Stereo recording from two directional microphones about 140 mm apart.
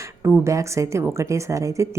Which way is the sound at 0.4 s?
20° right (ahead or behind).